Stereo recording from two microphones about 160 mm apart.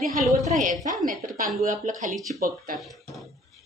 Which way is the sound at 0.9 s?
60° right (ahead or behind).